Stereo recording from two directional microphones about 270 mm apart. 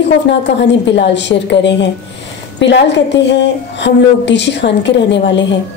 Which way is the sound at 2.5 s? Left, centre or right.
Left.